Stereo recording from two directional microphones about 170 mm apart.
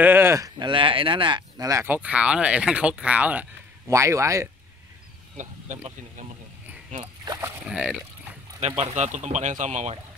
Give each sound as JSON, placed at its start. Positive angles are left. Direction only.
{"t": 0.0, "sound": "speech", "side_deg": -15}
{"t": 5.4, "sound": "speech", "side_deg": -45}
{"t": 7.2, "sound": "speech", "side_deg": -15}
{"t": 7.7, "sound": "speech", "side_deg": -5}
{"t": 8.5, "sound": "speech", "side_deg": -35}